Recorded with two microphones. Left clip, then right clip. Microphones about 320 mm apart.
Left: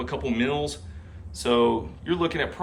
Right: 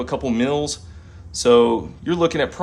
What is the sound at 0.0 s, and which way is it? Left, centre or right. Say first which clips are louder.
Speech: right 5 dB; centre.